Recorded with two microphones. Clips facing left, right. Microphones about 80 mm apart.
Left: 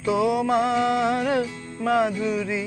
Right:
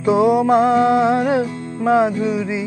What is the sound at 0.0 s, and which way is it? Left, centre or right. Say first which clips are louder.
Music: right 7 dB; right.